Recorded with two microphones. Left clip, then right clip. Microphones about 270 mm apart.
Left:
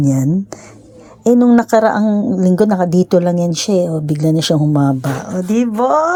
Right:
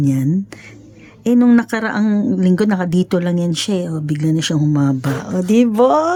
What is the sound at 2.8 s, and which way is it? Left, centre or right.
Speech, centre.